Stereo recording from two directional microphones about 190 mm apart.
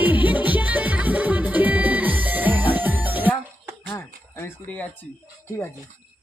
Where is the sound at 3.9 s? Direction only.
10° left (ahead or behind).